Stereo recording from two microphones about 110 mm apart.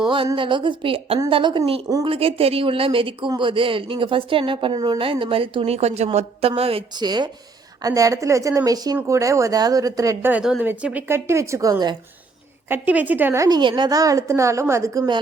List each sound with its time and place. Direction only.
0.0 s speech: 45° right (ahead or behind)
1.3 s speech: 45° right (ahead or behind)
2.0 s a woman's voice: 60° right (ahead or behind)
7.0 s a woman's voice: 40° right (ahead or behind)
10.6 s a woman's voice: 15° right (ahead or behind); by 11.9 s 35° right (ahead or behind)
12.6 s a woman's voice: 15° right (ahead or behind)
13.3 s a woman's voice: 30° right (ahead or behind)
13.6 s a woman's voice: 45° right (ahead or behind); by 15.0 s 30° right (ahead or behind)